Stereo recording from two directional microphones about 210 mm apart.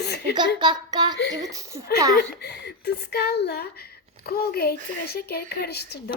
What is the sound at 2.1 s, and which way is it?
Speech, 50° left (ahead or behind).